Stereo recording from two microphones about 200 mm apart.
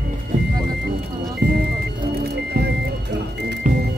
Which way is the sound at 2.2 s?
55° right (ahead or behind).